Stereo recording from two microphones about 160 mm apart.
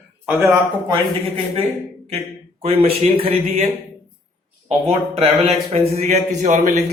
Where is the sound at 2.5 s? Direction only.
40° right (ahead or behind).